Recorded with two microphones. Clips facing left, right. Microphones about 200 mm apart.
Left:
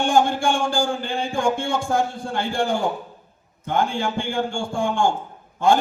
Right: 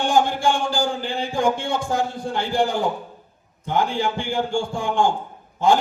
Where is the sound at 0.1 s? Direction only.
50° left (ahead or behind).